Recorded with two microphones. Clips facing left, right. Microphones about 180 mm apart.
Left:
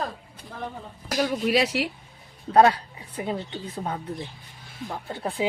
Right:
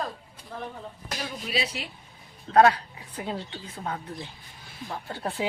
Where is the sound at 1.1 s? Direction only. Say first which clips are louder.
Left 10 dB; 80° left.